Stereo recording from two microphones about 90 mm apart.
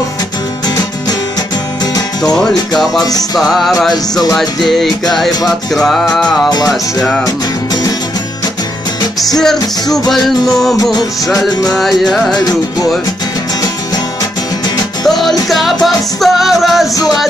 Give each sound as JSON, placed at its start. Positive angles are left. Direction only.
{"t": 2.3, "sound": "music", "side_deg": 5}
{"t": 3.0, "sound": "music", "side_deg": 45}
{"t": 3.3, "sound": "music", "side_deg": 0}
{"t": 7.2, "sound": "music", "side_deg": 45}
{"t": 9.9, "sound": "music", "side_deg": 5}
{"t": 15.0, "sound": "music", "side_deg": 0}